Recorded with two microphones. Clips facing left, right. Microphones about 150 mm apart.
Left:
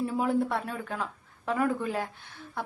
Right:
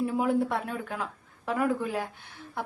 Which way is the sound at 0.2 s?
10° right (ahead or behind).